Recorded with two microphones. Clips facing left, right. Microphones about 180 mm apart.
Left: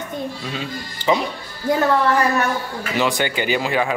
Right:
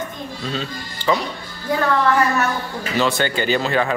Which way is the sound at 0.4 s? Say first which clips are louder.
Right 1 dB; 10° left (ahead or behind).